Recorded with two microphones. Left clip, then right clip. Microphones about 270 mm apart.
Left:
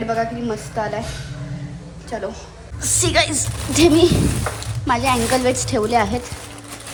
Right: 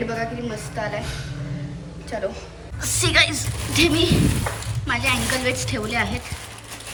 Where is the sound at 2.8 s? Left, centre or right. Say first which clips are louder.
Left 1 dB; centre.